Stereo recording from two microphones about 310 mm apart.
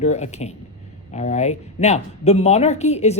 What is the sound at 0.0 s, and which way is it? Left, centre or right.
A woman's voice, left.